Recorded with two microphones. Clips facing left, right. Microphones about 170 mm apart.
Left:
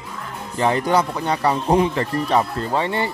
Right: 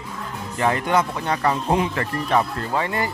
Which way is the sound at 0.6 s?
30° left (ahead or behind).